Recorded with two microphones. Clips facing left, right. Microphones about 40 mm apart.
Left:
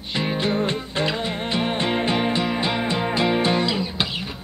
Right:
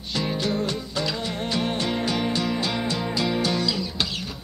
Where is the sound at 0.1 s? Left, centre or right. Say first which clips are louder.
Left 3 dB; left.